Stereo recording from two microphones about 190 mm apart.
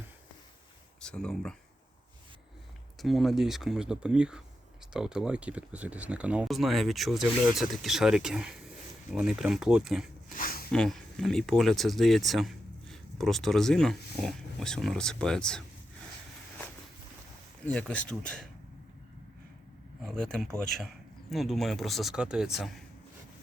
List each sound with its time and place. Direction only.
1.0 s speech: 5° left (ahead or behind)
3.0 s speech: centre (ahead or behind)
10.3 s a sound: 50° left (ahead or behind)
10.7 s speech: 5° left (ahead or behind)
17.7 s speech: 5° left (ahead or behind)
20.1 s speech: 5° left (ahead or behind)